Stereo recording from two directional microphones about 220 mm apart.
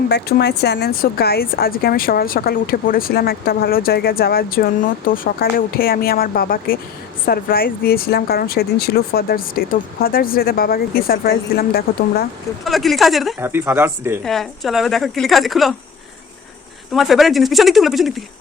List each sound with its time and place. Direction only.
0.1 s speech: 50° left (ahead or behind)
12.6 s a woman's voice: centre (ahead or behind)
14.3 s a woman's voice: centre (ahead or behind)
16.9 s a woman's voice: centre (ahead or behind)